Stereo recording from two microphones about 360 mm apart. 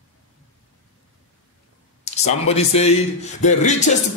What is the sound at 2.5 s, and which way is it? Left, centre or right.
Speech, centre.